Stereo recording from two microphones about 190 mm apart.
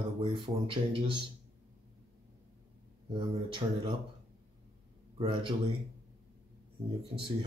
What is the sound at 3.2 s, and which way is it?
Speech, 25° right (ahead or behind).